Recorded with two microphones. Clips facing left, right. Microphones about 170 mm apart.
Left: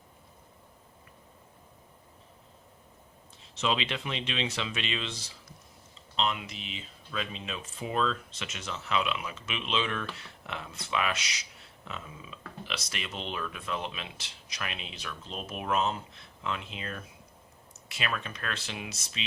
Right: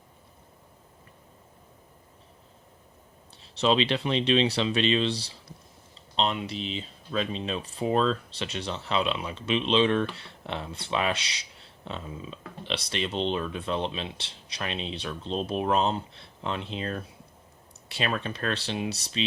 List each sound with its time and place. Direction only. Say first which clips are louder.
3.4 s speech: right 7 dB; 35° right (ahead or behind)